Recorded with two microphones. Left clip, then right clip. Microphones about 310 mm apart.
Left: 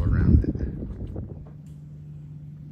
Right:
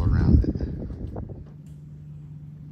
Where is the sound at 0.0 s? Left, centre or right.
Centre.